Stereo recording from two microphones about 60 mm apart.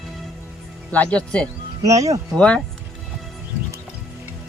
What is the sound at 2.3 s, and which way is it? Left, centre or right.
Speech, centre.